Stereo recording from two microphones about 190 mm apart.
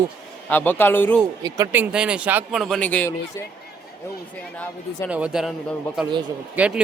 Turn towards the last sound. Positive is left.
turn(degrees=-5)  # may be behind; listen again after turning